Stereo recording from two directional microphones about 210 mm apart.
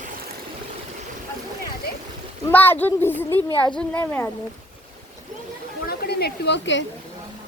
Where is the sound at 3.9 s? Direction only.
10° left (ahead or behind).